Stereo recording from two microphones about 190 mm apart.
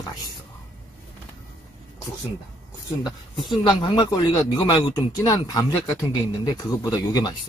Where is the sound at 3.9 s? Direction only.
20° left (ahead or behind).